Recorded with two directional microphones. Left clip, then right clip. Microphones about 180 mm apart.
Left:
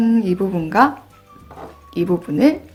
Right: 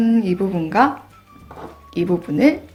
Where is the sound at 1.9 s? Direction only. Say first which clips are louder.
Left 1 dB; 15° left (ahead or behind).